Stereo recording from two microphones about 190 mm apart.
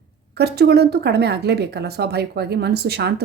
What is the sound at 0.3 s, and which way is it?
A woman's voice, 60° right (ahead or behind).